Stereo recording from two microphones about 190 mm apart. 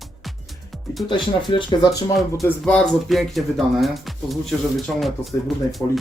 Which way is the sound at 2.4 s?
5° left (ahead or behind).